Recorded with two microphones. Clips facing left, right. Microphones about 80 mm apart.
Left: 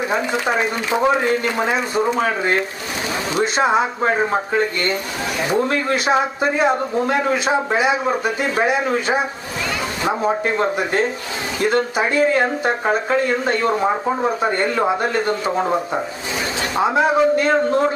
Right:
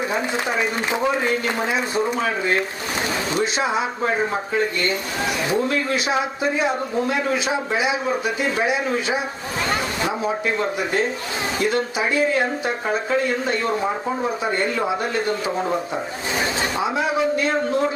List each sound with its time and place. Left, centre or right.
0.1 s speech: left
16.7 s speech: left